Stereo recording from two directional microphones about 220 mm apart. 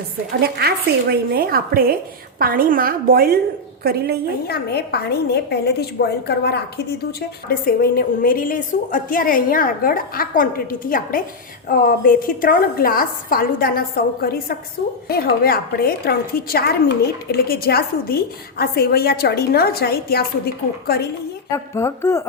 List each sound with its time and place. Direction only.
0.4 s a woman's voice: 45° right (ahead or behind)
4.4 s a woman's voice: 45° left (ahead or behind)
21.5 s a woman's voice: 10° left (ahead or behind)